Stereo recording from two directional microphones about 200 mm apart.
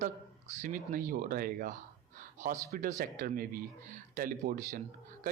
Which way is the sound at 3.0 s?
45° right (ahead or behind).